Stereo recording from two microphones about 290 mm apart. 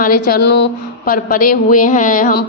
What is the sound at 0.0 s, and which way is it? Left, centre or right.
A woman's voice, left.